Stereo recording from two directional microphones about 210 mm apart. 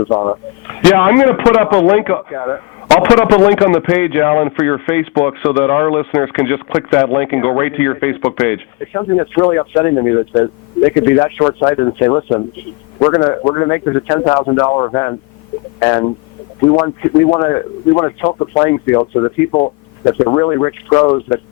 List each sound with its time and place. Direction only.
0.0 s speech: 20° left (ahead or behind)
0.8 s a man's voice: 10° left (ahead or behind)